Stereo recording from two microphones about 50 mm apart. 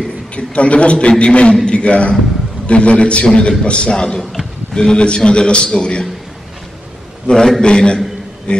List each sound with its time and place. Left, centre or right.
0.4 s a man's voice: left
7.2 s a man's voice: centre